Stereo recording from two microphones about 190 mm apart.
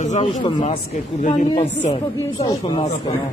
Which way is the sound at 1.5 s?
35° left (ahead or behind).